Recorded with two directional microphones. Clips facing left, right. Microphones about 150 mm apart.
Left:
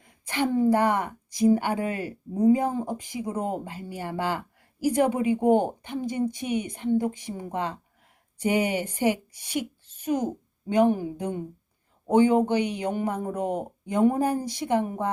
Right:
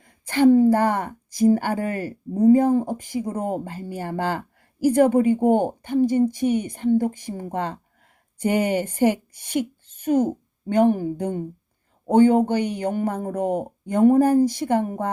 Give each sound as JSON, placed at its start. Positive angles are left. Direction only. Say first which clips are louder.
{"t": 0.3, "sound": "speech", "louder": "right 7 dB", "side_deg": -45}